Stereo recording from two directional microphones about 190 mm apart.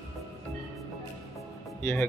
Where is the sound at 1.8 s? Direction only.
15° left (ahead or behind).